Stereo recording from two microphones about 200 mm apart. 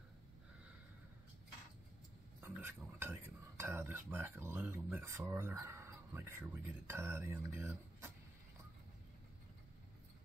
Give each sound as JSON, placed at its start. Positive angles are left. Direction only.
{"t": 2.4, "sound": "speech", "side_deg": -10}